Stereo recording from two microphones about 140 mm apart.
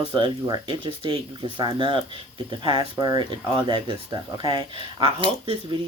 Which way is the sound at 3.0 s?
30° right (ahead or behind).